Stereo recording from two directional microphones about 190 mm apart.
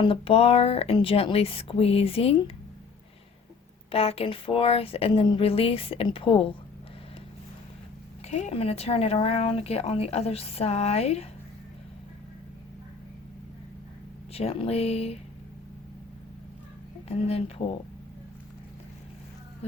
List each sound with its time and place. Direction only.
0.0 s speech: 30° left (ahead or behind)
3.9 s speech: 30° left (ahead or behind)
8.3 s speech: 35° left (ahead or behind)
14.3 s speech: 30° left (ahead or behind)
17.1 s speech: 35° left (ahead or behind)